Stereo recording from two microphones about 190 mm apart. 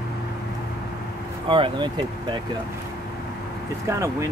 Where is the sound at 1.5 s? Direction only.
25° right (ahead or behind).